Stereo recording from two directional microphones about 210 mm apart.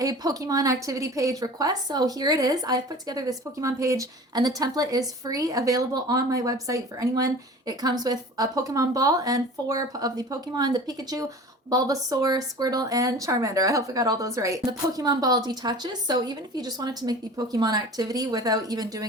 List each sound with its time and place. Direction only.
0.0 s speech: 15° right (ahead or behind)